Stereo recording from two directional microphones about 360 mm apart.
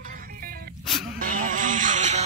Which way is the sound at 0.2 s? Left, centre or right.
Right.